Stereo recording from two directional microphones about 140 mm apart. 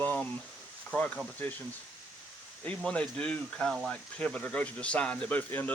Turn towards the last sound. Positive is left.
turn(degrees=10)  # may be behind; listen again after turning